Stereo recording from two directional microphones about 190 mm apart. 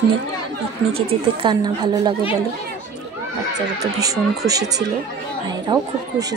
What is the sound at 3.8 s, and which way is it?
Speech, 20° right (ahead or behind).